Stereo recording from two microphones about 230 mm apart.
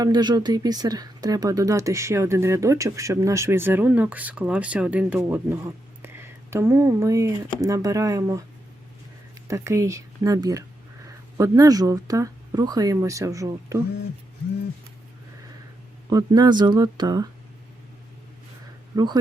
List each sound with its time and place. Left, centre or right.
0.0 s speech: centre
9.5 s speech: centre
16.0 s speech: centre
18.9 s speech: centre